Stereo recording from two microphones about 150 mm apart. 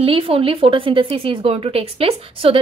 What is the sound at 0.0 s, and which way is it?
A woman's voice, 40° right (ahead or behind).